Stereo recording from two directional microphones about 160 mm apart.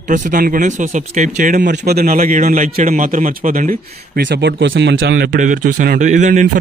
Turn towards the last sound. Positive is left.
turn(degrees=-50)  # may be behind; listen again after turning